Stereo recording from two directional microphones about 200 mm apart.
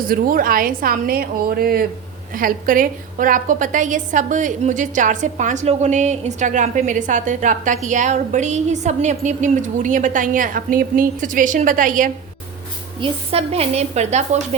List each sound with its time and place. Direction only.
0.1 s a woman's voice: 45° right (ahead or behind)
13.0 s a woman's voice: 30° right (ahead or behind)